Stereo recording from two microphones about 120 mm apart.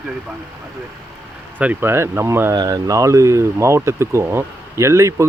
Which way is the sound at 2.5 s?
35° right (ahead or behind).